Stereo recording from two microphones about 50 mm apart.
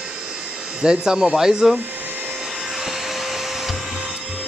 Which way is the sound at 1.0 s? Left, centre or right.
Centre.